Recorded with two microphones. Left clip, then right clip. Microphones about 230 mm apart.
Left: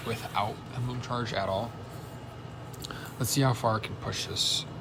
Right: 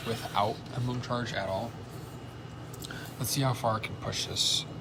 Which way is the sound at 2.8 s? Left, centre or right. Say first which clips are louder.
Left 2 dB; centre.